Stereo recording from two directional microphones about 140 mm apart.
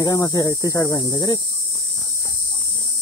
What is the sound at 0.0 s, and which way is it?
Speech, 25° left (ahead or behind).